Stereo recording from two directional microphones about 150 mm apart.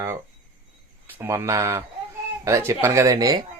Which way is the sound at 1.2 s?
20° right (ahead or behind).